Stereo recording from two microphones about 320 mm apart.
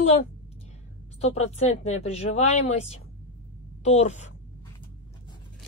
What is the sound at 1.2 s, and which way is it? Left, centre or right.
Speech, centre.